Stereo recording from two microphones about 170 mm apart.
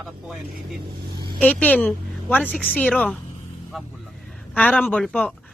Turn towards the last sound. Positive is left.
turn(degrees=0)  # may be behind; listen again after turning